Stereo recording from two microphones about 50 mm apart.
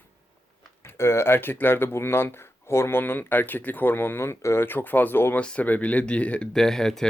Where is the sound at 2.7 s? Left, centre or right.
Left.